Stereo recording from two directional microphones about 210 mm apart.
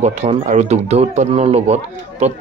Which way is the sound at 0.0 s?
30° right (ahead or behind).